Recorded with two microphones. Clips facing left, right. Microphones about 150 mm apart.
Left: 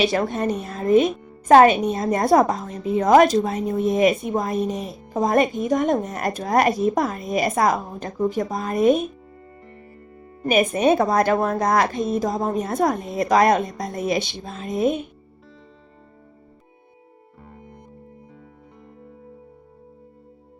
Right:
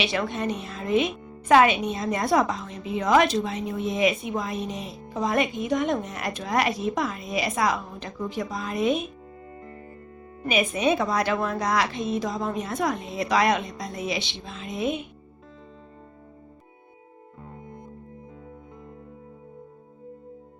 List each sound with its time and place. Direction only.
0.0 s a woman's voice: 45° left (ahead or behind)
4.7 s speech: centre (ahead or behind)
5.0 s a woman's voice: 45° left (ahead or behind)
10.4 s a woman's voice: 50° left (ahead or behind)